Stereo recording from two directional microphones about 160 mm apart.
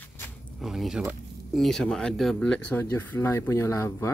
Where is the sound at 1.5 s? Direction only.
Centre (ahead or behind); by 4.1 s 20° left (ahead or behind).